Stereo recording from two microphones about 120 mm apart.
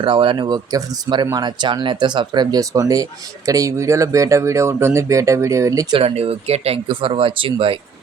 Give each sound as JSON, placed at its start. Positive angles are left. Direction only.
{"t": 0.0, "sound": "speech", "side_deg": -45}
{"t": 6.0, "sound": "speech", "side_deg": -55}